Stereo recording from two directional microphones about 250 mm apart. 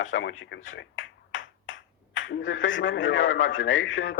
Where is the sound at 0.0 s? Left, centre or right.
Left.